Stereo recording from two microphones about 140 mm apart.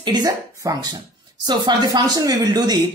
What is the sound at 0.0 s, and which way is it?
Speech, 30° right (ahead or behind).